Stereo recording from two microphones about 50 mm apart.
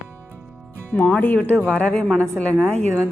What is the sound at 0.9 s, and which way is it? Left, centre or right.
Speech, left.